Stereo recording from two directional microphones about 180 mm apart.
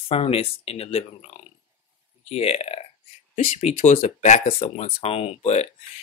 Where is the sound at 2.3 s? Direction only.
35° left (ahead or behind).